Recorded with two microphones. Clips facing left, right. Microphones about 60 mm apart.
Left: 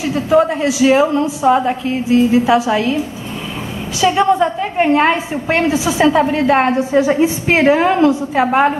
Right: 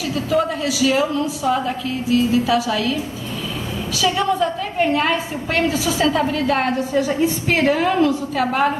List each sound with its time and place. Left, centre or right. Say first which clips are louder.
0.0 s a woman's voice: left 6 dB; left
4.0 s a woman's voice: left 6 dB; left